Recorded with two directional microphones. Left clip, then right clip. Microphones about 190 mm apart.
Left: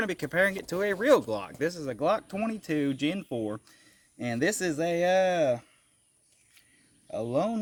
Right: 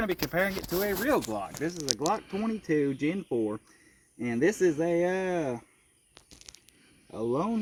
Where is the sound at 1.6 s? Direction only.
40° left (ahead or behind).